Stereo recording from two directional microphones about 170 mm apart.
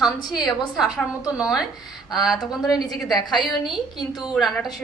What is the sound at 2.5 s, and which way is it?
Speech, 20° left (ahead or behind).